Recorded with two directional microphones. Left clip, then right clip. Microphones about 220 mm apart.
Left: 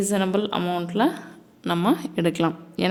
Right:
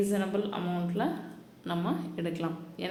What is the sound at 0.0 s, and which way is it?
A woman's voice, 50° left (ahead or behind).